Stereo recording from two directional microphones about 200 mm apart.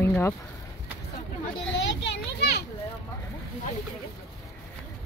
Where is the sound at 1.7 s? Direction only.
60° left (ahead or behind).